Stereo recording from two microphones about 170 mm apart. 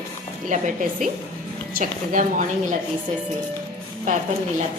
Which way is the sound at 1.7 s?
50° right (ahead or behind).